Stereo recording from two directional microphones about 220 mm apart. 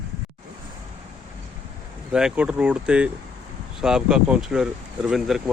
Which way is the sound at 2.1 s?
5° right (ahead or behind).